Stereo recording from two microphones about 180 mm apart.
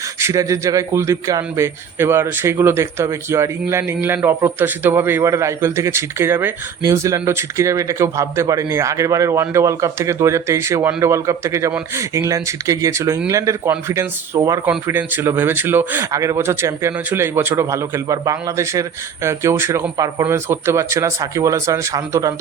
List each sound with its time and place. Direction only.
0.2 s a man's voice: 15° right (ahead or behind)